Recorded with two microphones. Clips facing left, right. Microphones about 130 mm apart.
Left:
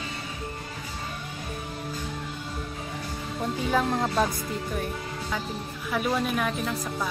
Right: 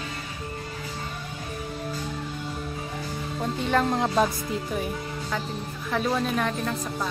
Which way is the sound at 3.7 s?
Centre (ahead or behind).